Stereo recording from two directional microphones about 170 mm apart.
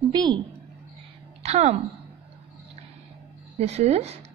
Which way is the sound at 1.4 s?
40° right (ahead or behind).